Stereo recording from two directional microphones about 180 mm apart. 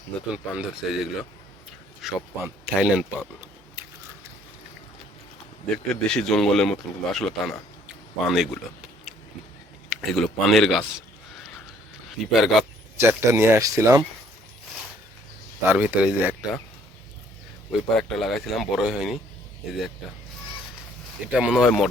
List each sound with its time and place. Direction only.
0.3 s a man's voice: 5° right (ahead or behind)
5.7 s a man's voice: 5° left (ahead or behind)
9.9 s a man's voice: centre (ahead or behind)
12.2 s a man's voice: centre (ahead or behind)
13.0 s speech: 15° right (ahead or behind)
15.6 s speech: 10° right (ahead or behind)
17.7 s a man's voice: centre (ahead or behind)
21.3 s a man's voice: 5° right (ahead or behind)